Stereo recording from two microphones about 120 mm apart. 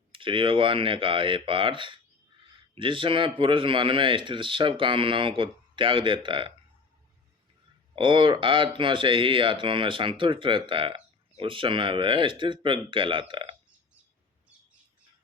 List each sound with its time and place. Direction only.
0.1 s speech: 45° right (ahead or behind)
7.9 s speech: 45° right (ahead or behind)